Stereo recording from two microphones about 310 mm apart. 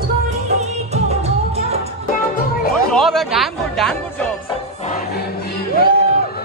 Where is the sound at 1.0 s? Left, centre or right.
Centre.